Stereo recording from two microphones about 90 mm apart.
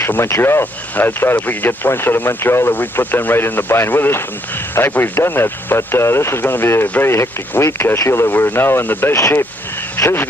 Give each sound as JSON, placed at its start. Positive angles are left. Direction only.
{"t": 0.0, "sound": "speech", "side_deg": 30}
{"t": 7.1, "sound": "speech", "side_deg": 30}